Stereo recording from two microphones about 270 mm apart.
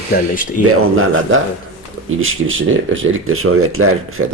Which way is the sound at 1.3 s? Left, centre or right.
Right.